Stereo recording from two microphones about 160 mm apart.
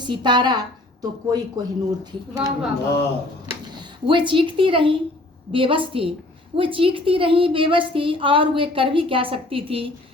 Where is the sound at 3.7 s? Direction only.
30° right (ahead or behind).